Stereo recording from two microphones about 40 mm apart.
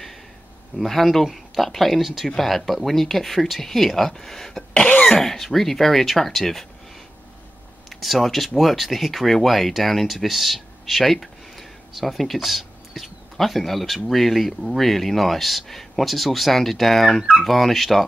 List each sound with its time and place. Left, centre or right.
0.7 s speech: centre
4.8 s cough: left
5.2 s speech: centre
7.9 s speech: centre